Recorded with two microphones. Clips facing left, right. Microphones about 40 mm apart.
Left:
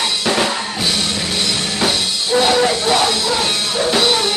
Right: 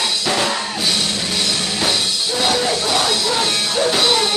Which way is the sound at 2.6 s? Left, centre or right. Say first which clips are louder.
Left 4 dB; left.